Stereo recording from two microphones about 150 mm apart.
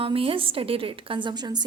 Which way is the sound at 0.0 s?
40° right (ahead or behind).